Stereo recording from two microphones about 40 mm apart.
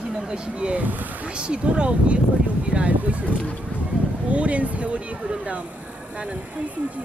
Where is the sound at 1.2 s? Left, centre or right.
Right.